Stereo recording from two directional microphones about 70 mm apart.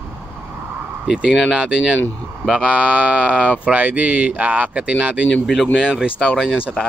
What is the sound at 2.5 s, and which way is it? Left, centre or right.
Speech, centre.